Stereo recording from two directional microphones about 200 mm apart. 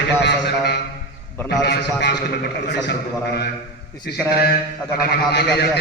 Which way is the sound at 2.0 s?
60° left (ahead or behind).